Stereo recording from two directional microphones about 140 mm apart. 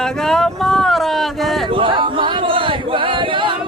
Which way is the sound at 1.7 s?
35° right (ahead or behind).